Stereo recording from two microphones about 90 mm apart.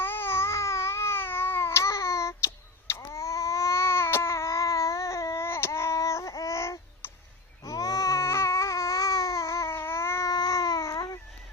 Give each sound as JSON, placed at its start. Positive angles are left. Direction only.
{"t": 0.0, "sound": "a sound", "side_deg": 25}
{"t": 2.9, "sound": "babbling", "side_deg": 35}
{"t": 7.6, "sound": "baby cry", "side_deg": 40}
{"t": 10.3, "sound": "babbling", "side_deg": 45}